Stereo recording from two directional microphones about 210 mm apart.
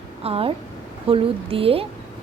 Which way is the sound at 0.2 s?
30° right (ahead or behind).